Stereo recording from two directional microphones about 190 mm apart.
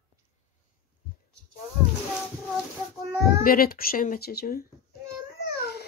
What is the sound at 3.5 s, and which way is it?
Speech, 50° left (ahead or behind).